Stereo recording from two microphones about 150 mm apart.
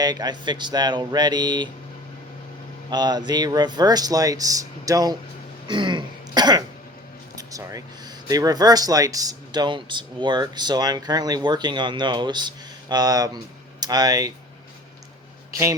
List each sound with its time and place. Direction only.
0.0 s speech: 25° right (ahead or behind)
2.9 s speech: 25° right (ahead or behind)
5.6 s throat clearing: 30° right (ahead or behind)
7.3 s speech: 25° right (ahead or behind)